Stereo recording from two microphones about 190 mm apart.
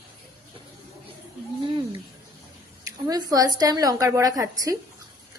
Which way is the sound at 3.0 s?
20° right (ahead or behind).